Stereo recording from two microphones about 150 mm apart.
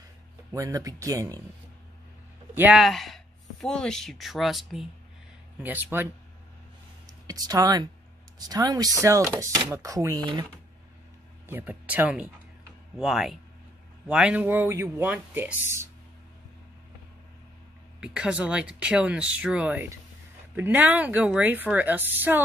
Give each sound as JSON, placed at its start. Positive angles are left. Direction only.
{"t": 0.5, "sound": "speech", "side_deg": -20}
{"t": 2.5, "sound": "a man's voice", "side_deg": -10}
{"t": 2.8, "sound": "speech", "side_deg": 0}
{"t": 5.6, "sound": "speech", "side_deg": -15}
{"t": 7.2, "sound": "speech", "side_deg": -25}
{"t": 11.4, "sound": "speech", "side_deg": -15}
{"t": 18.0, "sound": "speech", "side_deg": -5}